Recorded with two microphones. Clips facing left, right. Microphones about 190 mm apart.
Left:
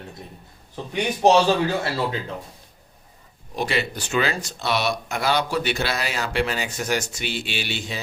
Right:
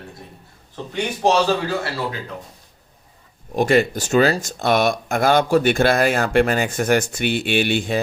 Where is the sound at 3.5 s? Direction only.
50° right (ahead or behind).